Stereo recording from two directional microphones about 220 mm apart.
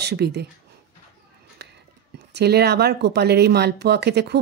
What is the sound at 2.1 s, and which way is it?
Speech, 50° right (ahead or behind).